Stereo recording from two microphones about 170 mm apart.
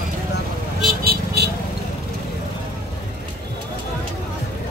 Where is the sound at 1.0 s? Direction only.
65° right (ahead or behind).